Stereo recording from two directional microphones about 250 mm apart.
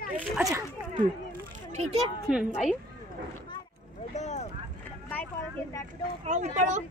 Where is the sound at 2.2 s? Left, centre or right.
Centre.